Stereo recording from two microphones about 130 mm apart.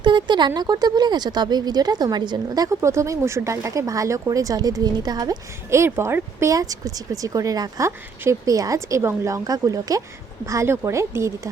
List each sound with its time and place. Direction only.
0.0 s speech: 35° right (ahead or behind)
5.8 s speech: 20° right (ahead or behind)